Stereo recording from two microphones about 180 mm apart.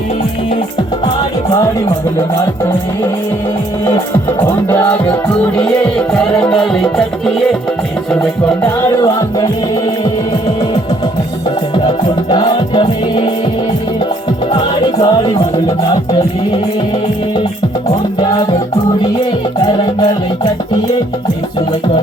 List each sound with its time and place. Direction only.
5.5 s music: 5° left (ahead or behind)
11.9 s music: 25° left (ahead or behind)
14.9 s music: 20° left (ahead or behind)
20.0 s music: 25° left (ahead or behind)